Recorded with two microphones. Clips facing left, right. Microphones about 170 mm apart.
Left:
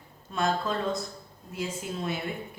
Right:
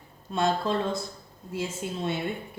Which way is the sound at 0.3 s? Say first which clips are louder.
Right 2 dB; 30° right (ahead or behind).